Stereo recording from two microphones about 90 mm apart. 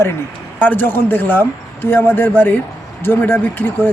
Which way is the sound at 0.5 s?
20° left (ahead or behind).